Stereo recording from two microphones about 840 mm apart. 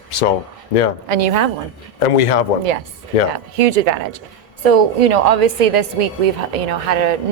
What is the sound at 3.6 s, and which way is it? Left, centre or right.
Speech, right.